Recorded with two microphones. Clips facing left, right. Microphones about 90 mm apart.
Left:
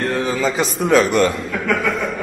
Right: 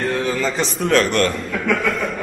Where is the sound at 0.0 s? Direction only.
Centre (ahead or behind).